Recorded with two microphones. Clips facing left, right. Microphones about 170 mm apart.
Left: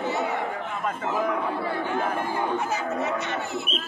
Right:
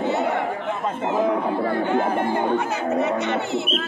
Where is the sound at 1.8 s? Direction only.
65° right (ahead or behind).